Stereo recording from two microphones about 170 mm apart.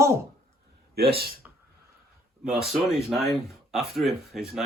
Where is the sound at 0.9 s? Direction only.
65° right (ahead or behind).